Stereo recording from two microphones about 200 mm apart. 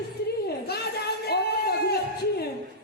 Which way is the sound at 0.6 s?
50° left (ahead or behind).